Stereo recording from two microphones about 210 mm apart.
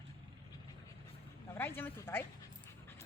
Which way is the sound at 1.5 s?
10° left (ahead or behind).